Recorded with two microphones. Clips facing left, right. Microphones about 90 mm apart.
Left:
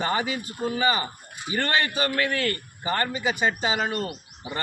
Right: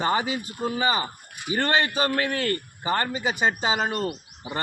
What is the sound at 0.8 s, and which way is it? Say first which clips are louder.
A man's voice: left 1 dB; 35° right (ahead or behind).